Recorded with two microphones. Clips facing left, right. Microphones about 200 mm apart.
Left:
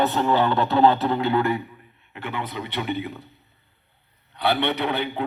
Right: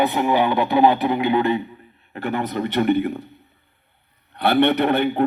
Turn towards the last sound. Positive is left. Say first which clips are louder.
# right 7 dB
turn(degrees=-50)  # may be behind; listen again after turning